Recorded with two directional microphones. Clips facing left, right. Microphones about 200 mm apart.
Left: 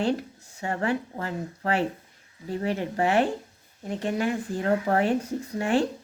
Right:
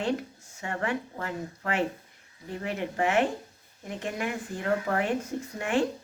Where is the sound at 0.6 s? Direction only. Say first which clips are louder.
Left 4 dB; 35° left (ahead or behind).